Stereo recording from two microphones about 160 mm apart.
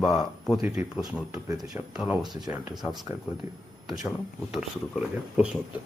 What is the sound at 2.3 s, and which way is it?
Speech, 25° right (ahead or behind).